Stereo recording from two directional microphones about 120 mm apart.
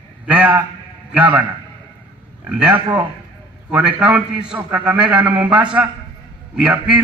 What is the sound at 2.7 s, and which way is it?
Speech, 40° right (ahead or behind).